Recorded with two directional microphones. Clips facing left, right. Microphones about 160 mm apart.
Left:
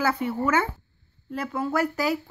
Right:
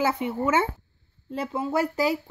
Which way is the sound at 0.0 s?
20° right (ahead or behind).